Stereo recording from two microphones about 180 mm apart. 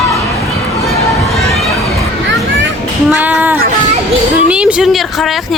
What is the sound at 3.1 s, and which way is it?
Child singing, 10° right (ahead or behind).